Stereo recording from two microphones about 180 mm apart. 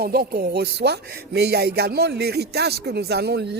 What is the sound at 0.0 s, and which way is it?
Speech, 60° right (ahead or behind).